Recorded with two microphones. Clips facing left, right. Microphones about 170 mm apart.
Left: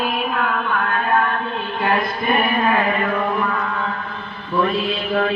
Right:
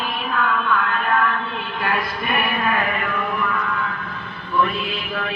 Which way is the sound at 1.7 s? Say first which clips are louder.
Left 4 dB; 25° left (ahead or behind).